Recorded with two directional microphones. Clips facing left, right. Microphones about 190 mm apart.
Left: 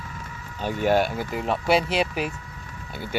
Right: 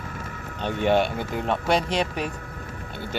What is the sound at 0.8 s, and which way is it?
Speech, 5° left (ahead or behind).